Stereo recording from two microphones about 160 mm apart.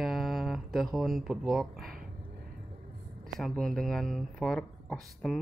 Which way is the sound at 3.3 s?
5° left (ahead or behind).